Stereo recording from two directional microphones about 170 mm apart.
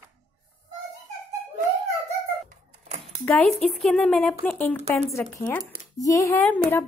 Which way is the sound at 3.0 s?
5° left (ahead or behind).